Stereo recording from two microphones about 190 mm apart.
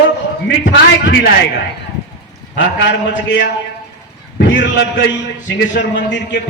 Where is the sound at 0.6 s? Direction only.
70° left (ahead or behind).